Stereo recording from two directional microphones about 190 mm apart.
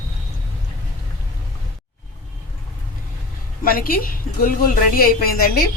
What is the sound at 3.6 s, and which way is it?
A woman's voice, 50° left (ahead or behind).